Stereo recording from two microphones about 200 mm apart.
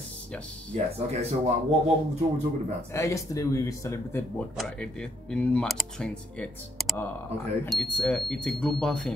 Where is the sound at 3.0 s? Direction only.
15° left (ahead or behind).